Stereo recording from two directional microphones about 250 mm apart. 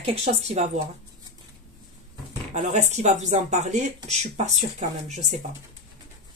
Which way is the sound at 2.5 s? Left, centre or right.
Right.